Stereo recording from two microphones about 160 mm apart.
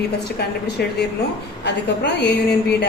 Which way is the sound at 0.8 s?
80° left.